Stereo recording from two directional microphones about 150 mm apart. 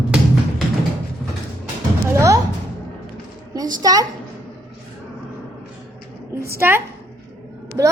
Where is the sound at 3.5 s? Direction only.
25° right (ahead or behind).